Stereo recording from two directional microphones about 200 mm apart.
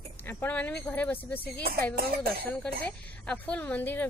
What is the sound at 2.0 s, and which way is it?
Speech, 50° right (ahead or behind).